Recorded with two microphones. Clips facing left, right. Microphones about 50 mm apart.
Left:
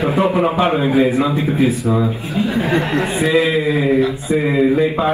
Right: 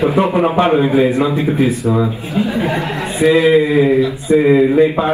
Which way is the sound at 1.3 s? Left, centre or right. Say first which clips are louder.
Right 1 dB; right.